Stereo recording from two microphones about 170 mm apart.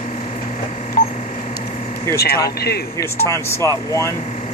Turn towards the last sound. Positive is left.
turn(degrees=15)  # may be behind; listen again after turning